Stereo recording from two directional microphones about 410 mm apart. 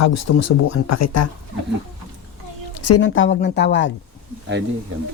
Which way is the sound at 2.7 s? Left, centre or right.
Left.